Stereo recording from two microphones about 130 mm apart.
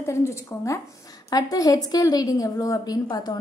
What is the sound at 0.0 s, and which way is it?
A woman's voice, 20° left (ahead or behind).